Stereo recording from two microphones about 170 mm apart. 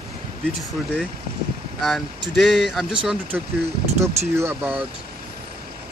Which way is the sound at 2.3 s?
Centre (ahead or behind).